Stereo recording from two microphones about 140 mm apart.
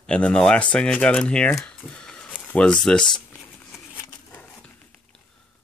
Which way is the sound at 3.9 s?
10° left (ahead or behind).